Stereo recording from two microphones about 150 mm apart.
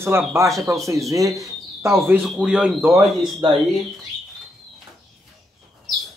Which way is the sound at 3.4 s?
35° right (ahead or behind).